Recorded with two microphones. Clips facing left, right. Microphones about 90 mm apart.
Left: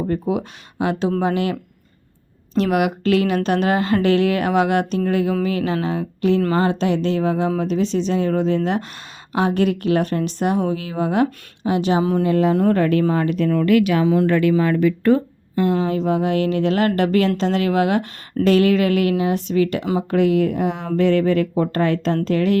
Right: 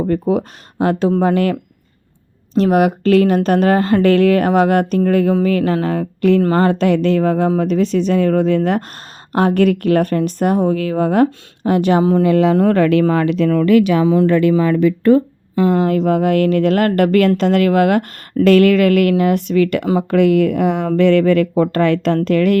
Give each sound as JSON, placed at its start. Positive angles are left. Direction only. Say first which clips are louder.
{"t": 0.1, "sound": "speech", "louder": "right 5 dB", "side_deg": -45}
{"t": 2.6, "sound": "a woman's voice", "louder": "right 5 dB", "side_deg": -40}
{"t": 12.2, "sound": "speech", "louder": "right 4 dB", "side_deg": -85}
{"t": 15.7, "sound": "speech", "louder": "right 5 dB", "side_deg": -55}